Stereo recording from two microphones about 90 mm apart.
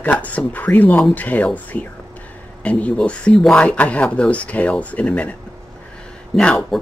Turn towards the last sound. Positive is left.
turn(degrees=10)  # may be behind; listen again after turning